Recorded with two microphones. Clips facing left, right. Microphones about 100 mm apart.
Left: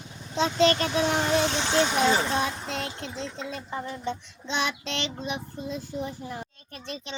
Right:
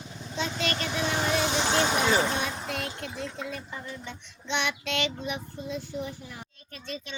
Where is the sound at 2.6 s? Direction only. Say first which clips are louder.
Left 1 dB; 30° left (ahead or behind).